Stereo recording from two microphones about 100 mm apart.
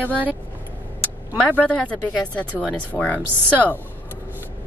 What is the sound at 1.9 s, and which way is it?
A woman's voice, 10° left (ahead or behind).